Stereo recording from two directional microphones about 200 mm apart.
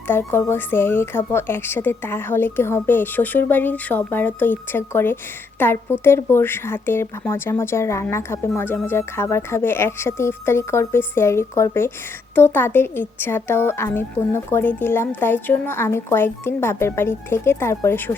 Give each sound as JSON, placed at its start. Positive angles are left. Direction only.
{"t": 0.1, "sound": "speech", "side_deg": 10}